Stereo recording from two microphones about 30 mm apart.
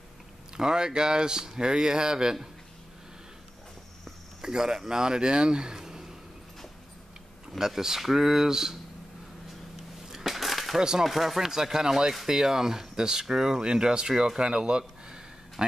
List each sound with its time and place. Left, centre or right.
0.6 s speech: right
4.4 s speech: right
7.5 s speech: centre
10.0 s crushing: centre
10.3 s a sound: centre
10.8 s speech: right
11.1 s speech: centre
11.4 s speech: centre
13.6 s speech: right